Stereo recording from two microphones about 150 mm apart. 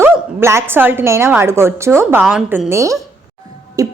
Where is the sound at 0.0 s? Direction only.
15° right (ahead or behind).